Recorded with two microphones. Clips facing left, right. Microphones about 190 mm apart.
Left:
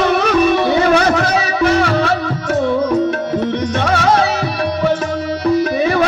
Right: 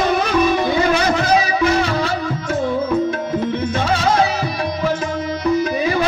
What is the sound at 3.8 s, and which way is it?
Music, 65° left (ahead or behind).